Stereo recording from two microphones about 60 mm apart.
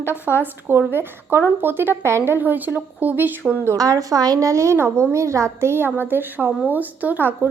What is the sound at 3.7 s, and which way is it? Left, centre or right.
A woman's voice, right.